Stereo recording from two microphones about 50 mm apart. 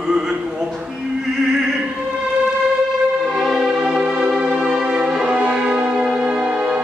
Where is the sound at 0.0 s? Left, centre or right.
Centre.